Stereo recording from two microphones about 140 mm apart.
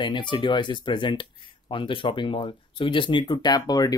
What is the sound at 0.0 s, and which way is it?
Speech, 35° left (ahead or behind).